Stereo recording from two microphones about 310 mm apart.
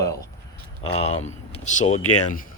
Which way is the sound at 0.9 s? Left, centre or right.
Centre.